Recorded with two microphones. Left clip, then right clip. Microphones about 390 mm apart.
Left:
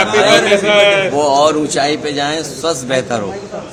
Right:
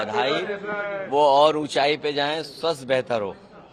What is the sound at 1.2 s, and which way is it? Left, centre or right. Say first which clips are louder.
A man's voice: left 5 dB; right.